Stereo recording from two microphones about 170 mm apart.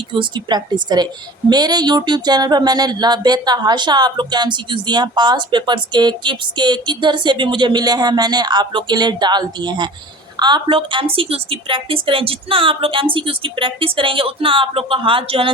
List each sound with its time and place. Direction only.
0.1 s a woman's voice: 25° right (ahead or behind)